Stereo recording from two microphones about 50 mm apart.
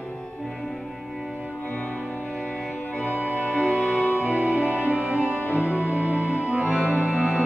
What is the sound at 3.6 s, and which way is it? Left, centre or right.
Music, centre.